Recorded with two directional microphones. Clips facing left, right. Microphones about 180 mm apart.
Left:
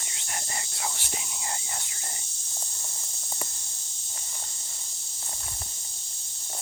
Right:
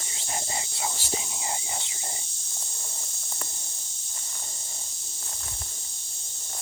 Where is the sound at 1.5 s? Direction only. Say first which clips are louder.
Right 3 dB; 20° right (ahead or behind).